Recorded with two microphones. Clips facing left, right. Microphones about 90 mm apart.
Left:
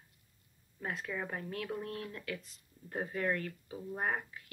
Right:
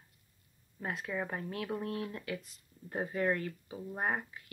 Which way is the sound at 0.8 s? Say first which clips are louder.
Right 2 dB; 10° right (ahead or behind).